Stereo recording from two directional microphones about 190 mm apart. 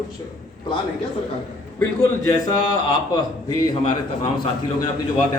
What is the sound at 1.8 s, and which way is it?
Speech, 15° left (ahead or behind).